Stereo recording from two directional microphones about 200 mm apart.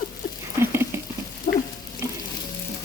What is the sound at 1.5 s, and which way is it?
Stir, 40° left (ahead or behind).